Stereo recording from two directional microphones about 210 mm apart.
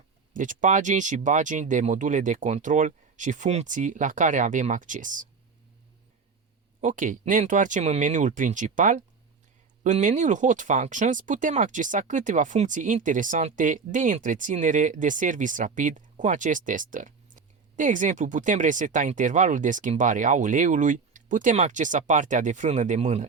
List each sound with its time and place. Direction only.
0.3 s speech: 40° right (ahead or behind)
6.8 s speech: 40° right (ahead or behind)